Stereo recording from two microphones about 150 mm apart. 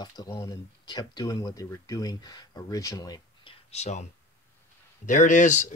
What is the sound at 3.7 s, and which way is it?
Speech, 45° left (ahead or behind).